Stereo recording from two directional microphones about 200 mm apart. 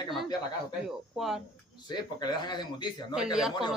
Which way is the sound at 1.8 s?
20° left (ahead or behind).